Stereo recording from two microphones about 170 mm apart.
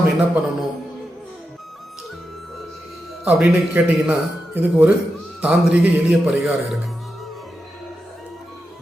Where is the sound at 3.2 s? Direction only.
5° right (ahead or behind).